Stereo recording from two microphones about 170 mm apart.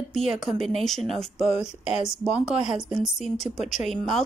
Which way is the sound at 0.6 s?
Centre (ahead or behind).